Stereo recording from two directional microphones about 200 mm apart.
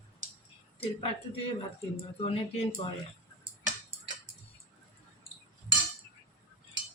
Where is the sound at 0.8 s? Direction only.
30° left (ahead or behind).